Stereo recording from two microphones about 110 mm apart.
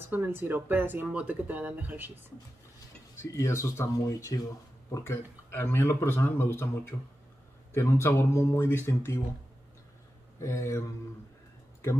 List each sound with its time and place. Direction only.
0.1 s speech: 15° right (ahead or behind)
3.2 s a man's voice: 25° left (ahead or behind)
10.4 s a man's voice: 25° left (ahead or behind)